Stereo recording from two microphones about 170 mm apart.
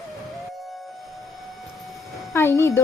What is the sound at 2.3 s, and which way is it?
Speech, 15° left (ahead or behind).